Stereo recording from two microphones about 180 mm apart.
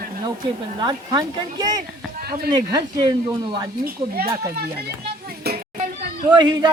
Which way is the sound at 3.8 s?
60° right (ahead or behind).